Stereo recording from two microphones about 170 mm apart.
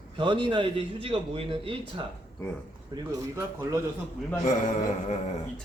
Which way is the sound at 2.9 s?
20° right (ahead or behind).